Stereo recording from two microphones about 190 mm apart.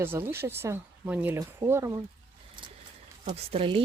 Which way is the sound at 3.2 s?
30° right (ahead or behind).